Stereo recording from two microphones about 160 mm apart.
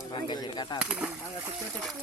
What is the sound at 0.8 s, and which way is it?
Speech, 10° right (ahead or behind).